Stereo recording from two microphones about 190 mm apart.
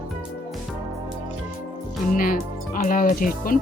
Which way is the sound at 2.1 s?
45° left (ahead or behind).